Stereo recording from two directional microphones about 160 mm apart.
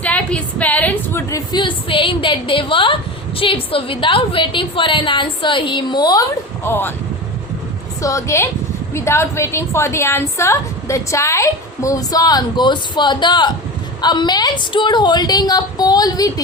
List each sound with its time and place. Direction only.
0.0 s a woman's voice: 10° left (ahead or behind)
1.5 s a woman's voice: 30° left (ahead or behind)
6.7 s speech: 15° left (ahead or behind)
8.0 s a woman's voice: 20° left (ahead or behind)